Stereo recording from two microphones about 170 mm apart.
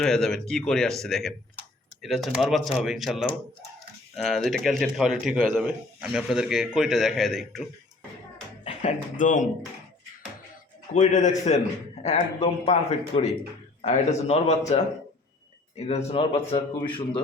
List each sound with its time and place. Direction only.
0.0 s speech: 5° left (ahead or behind)
8.6 s speech: 40° left (ahead or behind)
10.9 s a man's voice: 45° left (ahead or behind)
15.7 s a man's voice: 40° left (ahead or behind)